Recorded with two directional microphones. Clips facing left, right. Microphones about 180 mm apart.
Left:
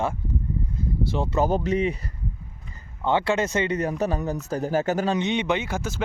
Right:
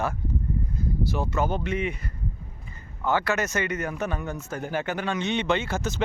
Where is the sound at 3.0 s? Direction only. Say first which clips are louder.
Left 3 dB; 25° left (ahead or behind).